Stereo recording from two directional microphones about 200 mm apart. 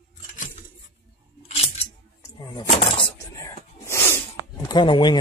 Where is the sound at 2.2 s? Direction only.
20° left (ahead or behind).